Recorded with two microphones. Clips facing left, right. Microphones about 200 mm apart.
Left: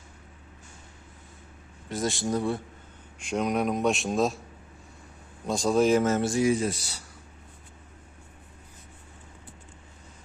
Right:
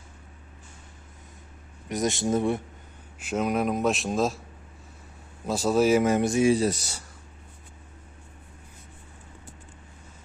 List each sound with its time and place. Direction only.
1.9 s speech: 20° right (ahead or behind)
3.2 s a man's voice: 5° right (ahead or behind)
5.5 s speech: 5° right (ahead or behind); by 6.5 s 20° right (ahead or behind)
6.5 s speech: 40° right (ahead or behind)